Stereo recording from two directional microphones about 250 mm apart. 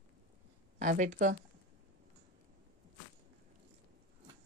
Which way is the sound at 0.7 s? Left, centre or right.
Right.